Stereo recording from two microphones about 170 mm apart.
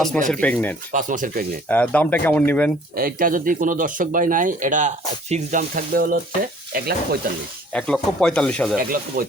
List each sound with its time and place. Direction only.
0.3 s speech: 10° left (ahead or behind)
0.9 s speech: 50° right (ahead or behind)
1.6 s speech: 10° left (ahead or behind)
2.9 s speech: 55° right (ahead or behind)
6.7 s sizzle: 65° right (ahead or behind)
7.7 s speech: 5° left (ahead or behind)
8.8 s sizzle: 60° right (ahead or behind)